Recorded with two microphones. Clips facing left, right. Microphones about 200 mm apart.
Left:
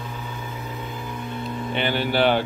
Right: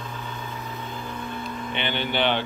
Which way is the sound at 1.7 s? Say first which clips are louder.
Left 5 dB; 40° left (ahead or behind).